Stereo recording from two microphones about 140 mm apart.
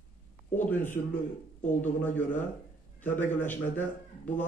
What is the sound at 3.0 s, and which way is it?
Speech, 15° left (ahead or behind).